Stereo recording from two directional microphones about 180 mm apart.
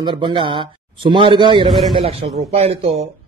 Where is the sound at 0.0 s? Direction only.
25° right (ahead or behind).